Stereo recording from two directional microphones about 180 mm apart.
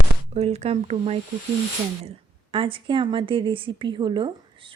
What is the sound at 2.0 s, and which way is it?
A woman's voice, 30° right (ahead or behind).